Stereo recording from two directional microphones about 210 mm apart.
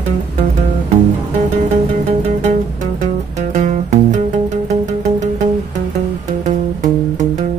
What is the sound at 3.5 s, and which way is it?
Music, 35° right (ahead or behind).